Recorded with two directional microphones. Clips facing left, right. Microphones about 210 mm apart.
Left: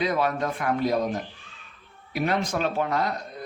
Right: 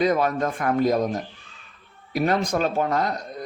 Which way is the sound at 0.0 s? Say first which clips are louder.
Right 4 dB; 45° right (ahead or behind).